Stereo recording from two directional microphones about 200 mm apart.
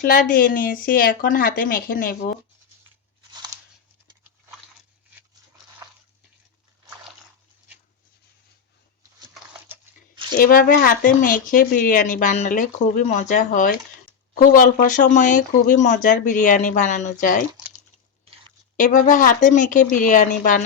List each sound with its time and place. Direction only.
0.0 s speech: 45° left (ahead or behind)
9.3 s a sound: 5° right (ahead or behind)
10.3 s speech: 45° left (ahead or behind)
18.8 s speech: 40° left (ahead or behind)